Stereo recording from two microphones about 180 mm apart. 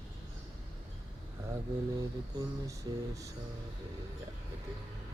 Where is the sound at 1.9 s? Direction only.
20° right (ahead or behind).